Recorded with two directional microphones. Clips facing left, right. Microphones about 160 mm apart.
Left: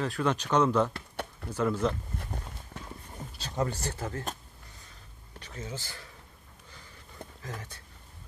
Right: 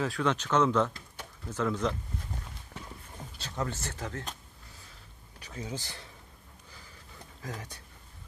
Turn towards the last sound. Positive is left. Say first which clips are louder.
# right 1 dB
turn(degrees=-15)  # may be behind; listen again after turning